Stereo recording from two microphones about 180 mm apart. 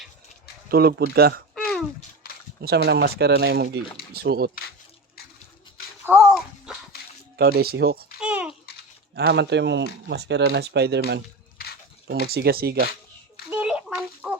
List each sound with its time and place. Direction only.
0.7 s speech: 60° right (ahead or behind)
1.5 s a sound: 5° left (ahead or behind)
2.6 s speech: 65° right (ahead or behind)
6.1 s a sound: 5° right (ahead or behind)
7.3 s speech: 60° right (ahead or behind)
8.2 s babbling: 5° right (ahead or behind)
9.1 s speech: 65° right (ahead or behind)
12.2 s speech: 60° right (ahead or behind)
13.5 s a sound: 10° right (ahead or behind)